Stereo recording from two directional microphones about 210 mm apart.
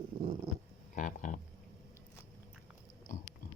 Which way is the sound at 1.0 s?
40° left (ahead or behind).